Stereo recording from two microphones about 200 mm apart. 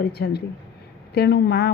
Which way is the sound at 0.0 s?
55° left (ahead or behind).